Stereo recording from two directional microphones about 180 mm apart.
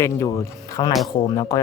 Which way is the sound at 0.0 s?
20° left (ahead or behind).